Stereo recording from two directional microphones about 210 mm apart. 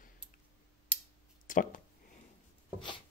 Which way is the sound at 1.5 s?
40° left (ahead or behind).